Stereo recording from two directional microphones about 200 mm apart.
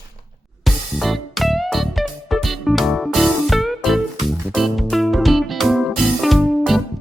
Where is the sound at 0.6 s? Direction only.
Centre (ahead or behind).